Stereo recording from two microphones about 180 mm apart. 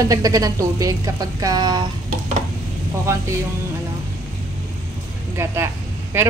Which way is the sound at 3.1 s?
15° right (ahead or behind).